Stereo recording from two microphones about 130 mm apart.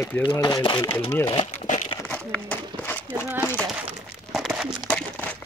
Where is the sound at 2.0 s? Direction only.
10° left (ahead or behind).